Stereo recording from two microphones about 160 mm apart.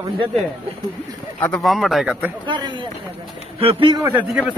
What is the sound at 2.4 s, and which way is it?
Speech, 30° right (ahead or behind).